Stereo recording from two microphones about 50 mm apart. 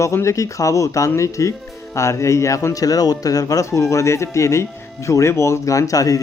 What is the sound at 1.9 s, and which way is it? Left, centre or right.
Speech, left.